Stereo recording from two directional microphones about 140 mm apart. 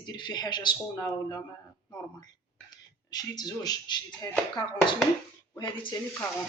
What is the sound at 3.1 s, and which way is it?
Speech, 30° left (ahead or behind).